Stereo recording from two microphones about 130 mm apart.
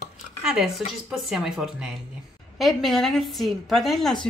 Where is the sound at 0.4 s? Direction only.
5° right (ahead or behind).